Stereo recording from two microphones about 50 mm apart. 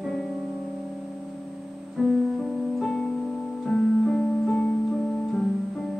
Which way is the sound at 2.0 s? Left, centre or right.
Centre.